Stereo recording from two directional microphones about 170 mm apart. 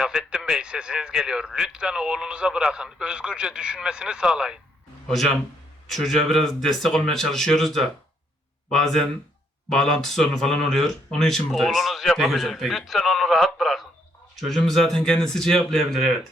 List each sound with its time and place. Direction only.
0.0 s speech: 5° right (ahead or behind)